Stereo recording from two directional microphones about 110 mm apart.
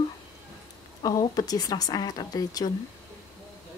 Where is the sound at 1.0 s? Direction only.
35° left (ahead or behind).